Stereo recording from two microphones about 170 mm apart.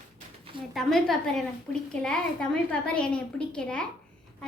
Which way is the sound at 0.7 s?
Centre (ahead or behind).